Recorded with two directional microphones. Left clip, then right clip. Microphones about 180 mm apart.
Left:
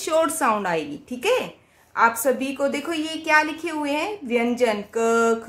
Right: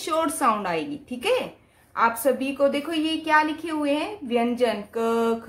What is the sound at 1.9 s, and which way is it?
Mantra, 10° left (ahead or behind).